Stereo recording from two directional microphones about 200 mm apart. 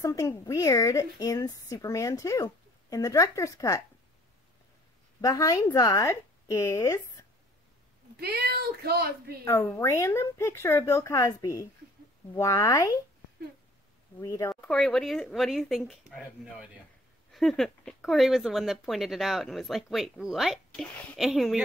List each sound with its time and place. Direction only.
0.0 s a woman's voice: 15° left (ahead or behind)
5.2 s a woman's voice: 15° left (ahead or behind)
8.2 s speech: 50° right (ahead or behind)
9.4 s a woman's voice: 10° left (ahead or behind)
14.2 s a woman's voice: 15° left (ahead or behind)
14.5 s speech: 5° left (ahead or behind)